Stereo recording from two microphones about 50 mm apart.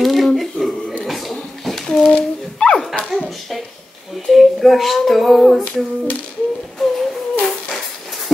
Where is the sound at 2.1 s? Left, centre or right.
Centre.